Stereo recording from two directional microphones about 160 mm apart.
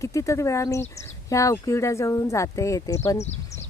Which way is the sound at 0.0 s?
20° left (ahead or behind).